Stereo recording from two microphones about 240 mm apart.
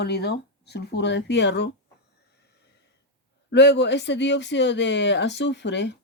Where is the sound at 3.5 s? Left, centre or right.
Left.